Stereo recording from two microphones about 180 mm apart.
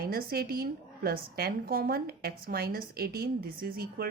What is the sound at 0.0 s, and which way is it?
A woman's voice, 55° right (ahead or behind).